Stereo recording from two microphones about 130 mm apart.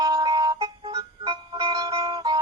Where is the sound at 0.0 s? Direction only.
30° right (ahead or behind).